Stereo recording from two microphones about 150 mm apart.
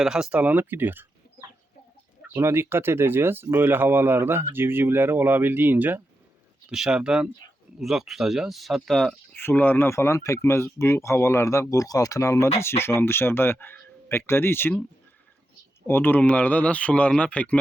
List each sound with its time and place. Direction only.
0.0 s speech: 5° right (ahead or behind)
9.3 s speech: 15° left (ahead or behind)
15.9 s speech: 15° left (ahead or behind)